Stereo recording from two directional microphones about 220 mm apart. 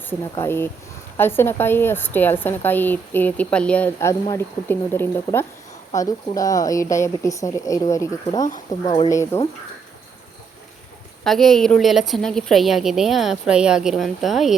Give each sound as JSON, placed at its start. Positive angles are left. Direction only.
{"t": 0.1, "sound": "a woman's voice", "side_deg": 10}
{"t": 11.2, "sound": "a woman's voice", "side_deg": 0}